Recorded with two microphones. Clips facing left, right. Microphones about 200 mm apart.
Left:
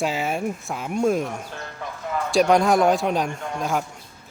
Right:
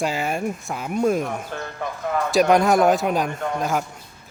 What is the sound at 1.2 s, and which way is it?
Speech, 55° right (ahead or behind).